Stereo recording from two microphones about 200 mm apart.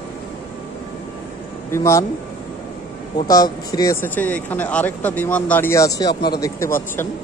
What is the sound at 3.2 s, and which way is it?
Speech, 20° left (ahead or behind).